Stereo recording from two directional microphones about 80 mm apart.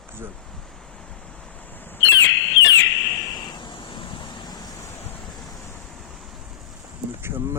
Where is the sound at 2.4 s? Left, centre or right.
Left.